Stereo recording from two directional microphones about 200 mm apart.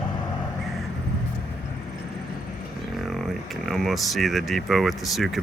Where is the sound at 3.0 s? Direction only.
Centre (ahead or behind).